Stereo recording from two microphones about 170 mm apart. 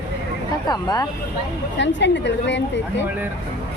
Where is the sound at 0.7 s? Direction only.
25° left (ahead or behind).